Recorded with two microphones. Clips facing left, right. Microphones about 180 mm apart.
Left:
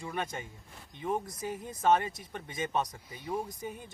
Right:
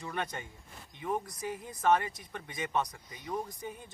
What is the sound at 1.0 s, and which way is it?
Speech, 25° left (ahead or behind).